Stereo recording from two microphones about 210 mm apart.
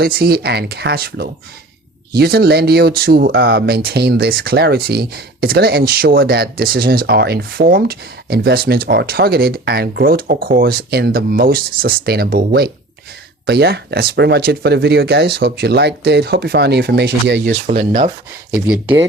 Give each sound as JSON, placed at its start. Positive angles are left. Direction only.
{"t": 0.0, "sound": "speech", "side_deg": -45}
{"t": 17.7, "sound": "speech", "side_deg": -40}
{"t": 18.7, "sound": "speech", "side_deg": -5}